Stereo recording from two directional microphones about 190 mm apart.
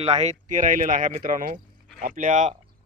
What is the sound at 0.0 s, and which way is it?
A man's voice, 35° right (ahead or behind).